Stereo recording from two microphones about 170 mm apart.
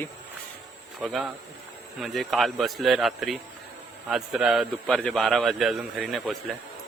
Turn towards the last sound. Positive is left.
turn(degrees=0)  # may be behind; listen again after turning